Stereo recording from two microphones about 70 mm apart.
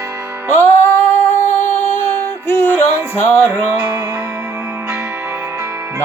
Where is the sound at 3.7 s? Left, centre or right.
Right.